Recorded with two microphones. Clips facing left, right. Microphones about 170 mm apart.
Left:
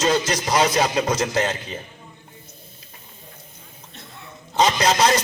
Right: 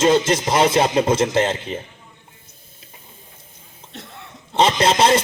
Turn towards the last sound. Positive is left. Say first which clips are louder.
# right 3 dB
turn(degrees=-25)  # may be behind; listen again after turning